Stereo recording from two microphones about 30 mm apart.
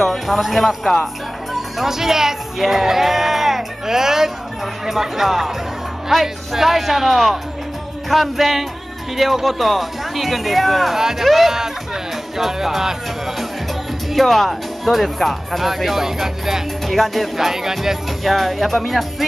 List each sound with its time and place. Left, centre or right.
0.3 s speech: centre
11.0 s speech: centre
14.1 s speech: centre
16.8 s music: centre
17.5 s speech: centre
18.2 s speech: centre